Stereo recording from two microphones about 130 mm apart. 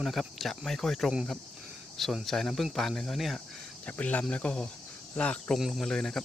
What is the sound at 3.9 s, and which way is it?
Speech, 10° left (ahead or behind).